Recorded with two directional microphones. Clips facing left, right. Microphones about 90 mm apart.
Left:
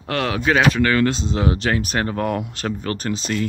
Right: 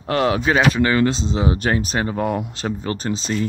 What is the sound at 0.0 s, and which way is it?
Speech, 10° right (ahead or behind).